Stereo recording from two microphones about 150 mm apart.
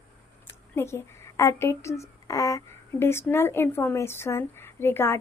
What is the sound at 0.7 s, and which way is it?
A woman's voice, 15° left (ahead or behind).